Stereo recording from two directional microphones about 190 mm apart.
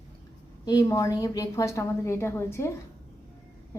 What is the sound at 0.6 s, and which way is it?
A woman's voice, 20° left (ahead or behind).